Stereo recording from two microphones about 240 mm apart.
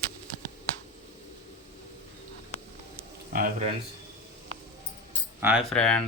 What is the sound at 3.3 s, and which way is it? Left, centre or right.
Speech, right.